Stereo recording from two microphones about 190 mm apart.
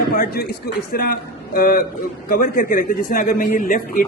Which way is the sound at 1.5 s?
50° left (ahead or behind).